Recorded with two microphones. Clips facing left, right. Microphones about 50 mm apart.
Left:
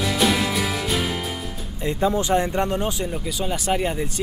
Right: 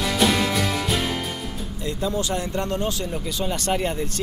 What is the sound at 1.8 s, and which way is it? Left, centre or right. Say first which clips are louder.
Speech: left 4 dB; left.